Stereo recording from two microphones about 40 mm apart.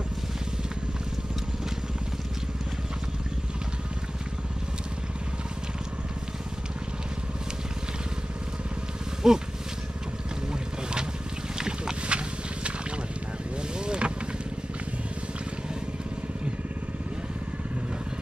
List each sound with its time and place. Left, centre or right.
9.2 s speech: centre
10.5 s boat: right
11.5 s a sound: centre
13.6 s vehicle: right